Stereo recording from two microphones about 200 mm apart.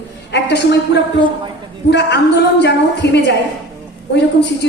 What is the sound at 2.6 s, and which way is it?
Speech, 60° left (ahead or behind).